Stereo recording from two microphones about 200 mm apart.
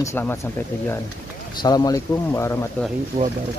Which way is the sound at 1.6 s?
20° left (ahead or behind).